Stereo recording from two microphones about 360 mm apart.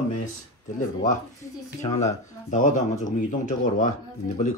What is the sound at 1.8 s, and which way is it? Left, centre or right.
Speech, centre.